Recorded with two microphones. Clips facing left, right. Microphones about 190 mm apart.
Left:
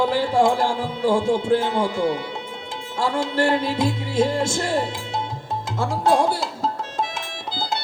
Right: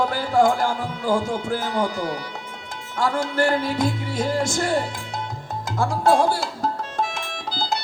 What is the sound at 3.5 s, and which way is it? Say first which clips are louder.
Music: left 1 dB; 25° left (ahead or behind).